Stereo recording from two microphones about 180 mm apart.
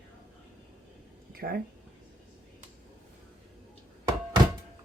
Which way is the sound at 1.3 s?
60° right (ahead or behind).